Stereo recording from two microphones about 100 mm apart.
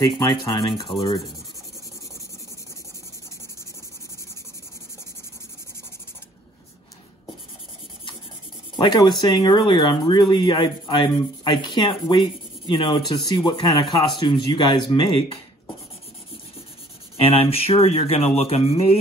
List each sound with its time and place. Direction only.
0.2 s speech: 50° left (ahead or behind)
8.8 s speech: 50° left (ahead or behind)
17.2 s speech: 75° left (ahead or behind)